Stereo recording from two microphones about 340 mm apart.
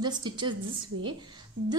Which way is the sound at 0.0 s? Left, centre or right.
Centre.